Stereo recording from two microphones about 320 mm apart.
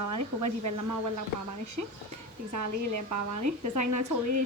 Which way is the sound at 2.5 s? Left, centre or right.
Right.